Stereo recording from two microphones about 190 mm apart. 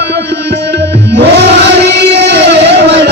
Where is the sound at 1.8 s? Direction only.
60° right (ahead or behind).